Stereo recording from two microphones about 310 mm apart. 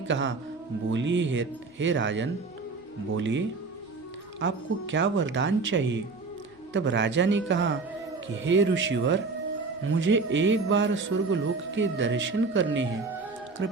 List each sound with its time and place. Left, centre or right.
0.1 s a man's voice: right